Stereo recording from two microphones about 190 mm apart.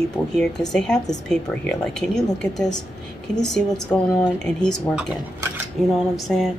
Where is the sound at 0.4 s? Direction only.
5° left (ahead or behind).